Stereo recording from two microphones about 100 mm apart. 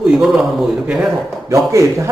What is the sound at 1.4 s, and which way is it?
Speech, 30° right (ahead or behind).